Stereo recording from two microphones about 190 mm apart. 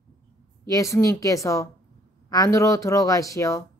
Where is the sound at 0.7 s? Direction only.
15° left (ahead or behind).